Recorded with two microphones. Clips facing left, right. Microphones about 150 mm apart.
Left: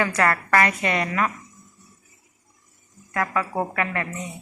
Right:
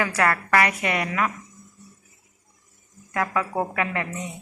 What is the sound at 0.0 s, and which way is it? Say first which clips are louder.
A woman's voice: left 1 dB; 10° right (ahead or behind).